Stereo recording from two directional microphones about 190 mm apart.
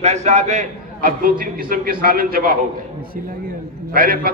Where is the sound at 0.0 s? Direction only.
35° right (ahead or behind).